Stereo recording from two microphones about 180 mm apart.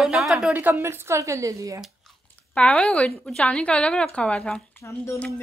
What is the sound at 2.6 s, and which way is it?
Speech, 5° left (ahead or behind).